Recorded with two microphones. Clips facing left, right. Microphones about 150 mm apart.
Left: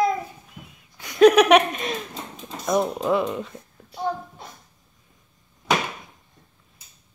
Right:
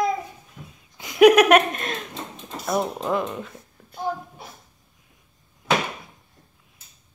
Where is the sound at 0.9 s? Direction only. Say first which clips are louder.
Even; 20° right (ahead or behind).